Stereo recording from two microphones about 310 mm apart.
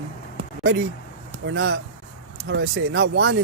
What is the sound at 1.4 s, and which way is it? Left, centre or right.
Speech, right.